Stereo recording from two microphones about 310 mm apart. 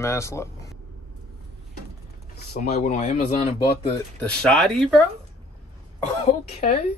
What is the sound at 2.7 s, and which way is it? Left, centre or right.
Speech, left.